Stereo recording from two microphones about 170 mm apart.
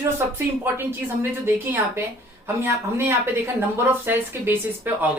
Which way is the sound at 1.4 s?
15° right (ahead or behind).